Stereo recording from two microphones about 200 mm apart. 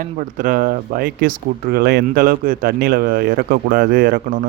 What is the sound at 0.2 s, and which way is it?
Speech, 40° right (ahead or behind).